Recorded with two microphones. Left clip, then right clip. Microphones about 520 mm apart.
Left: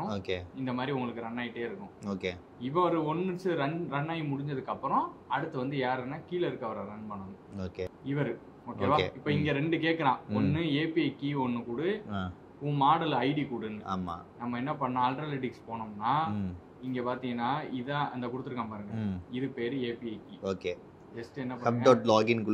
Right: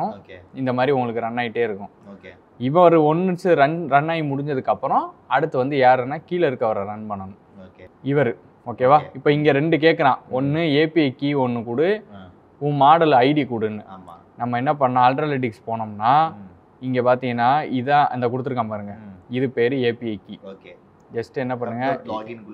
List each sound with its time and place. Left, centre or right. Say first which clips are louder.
0.7 s speech: right 15 dB; right
8.0 s a man's voice: right 17 dB; right
22.0 s speech: left 5 dB; left